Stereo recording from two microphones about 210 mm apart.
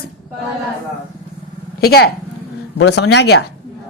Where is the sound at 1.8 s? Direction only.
50° left (ahead or behind).